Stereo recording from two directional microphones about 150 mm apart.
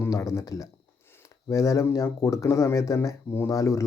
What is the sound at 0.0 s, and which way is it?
Speech, 20° left (ahead or behind).